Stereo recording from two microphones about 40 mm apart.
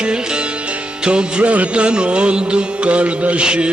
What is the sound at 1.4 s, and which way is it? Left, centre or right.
Music, right.